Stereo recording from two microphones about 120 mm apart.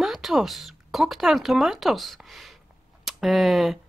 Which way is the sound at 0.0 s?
Centre (ahead or behind).